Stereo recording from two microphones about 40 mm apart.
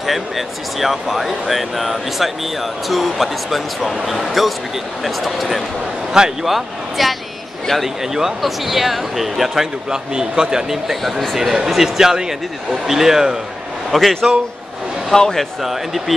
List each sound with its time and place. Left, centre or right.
0.0 s speech: centre
9.8 s speech: centre
10.7 s speech: centre
13.9 s speech: centre
15.6 s speech: centre